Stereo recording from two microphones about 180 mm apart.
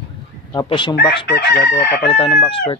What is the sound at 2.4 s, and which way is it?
Speech, 30° left (ahead or behind).